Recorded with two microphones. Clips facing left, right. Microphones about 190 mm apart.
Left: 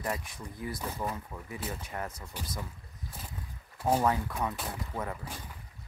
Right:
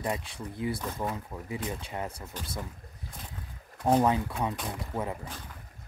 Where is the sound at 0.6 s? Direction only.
25° right (ahead or behind).